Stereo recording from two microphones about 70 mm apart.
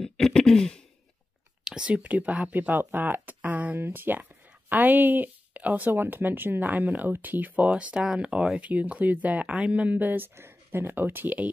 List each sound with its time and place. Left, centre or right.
0.0 s throat clearing: centre
1.6 s speech: centre